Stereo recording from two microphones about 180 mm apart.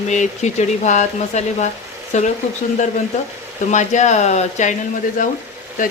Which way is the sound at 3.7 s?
40° left (ahead or behind).